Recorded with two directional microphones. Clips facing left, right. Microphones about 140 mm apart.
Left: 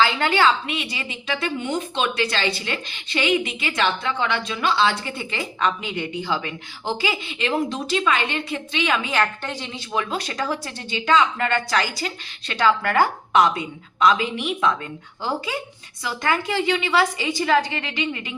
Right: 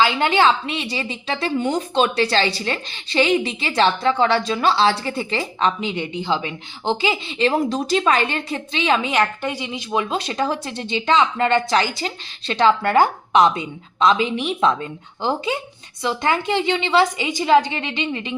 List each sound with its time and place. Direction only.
0.0 s a woman's voice: 20° right (ahead or behind)
9.1 s a woman's voice: 10° right (ahead or behind)
9.9 s speech: 25° right (ahead or behind)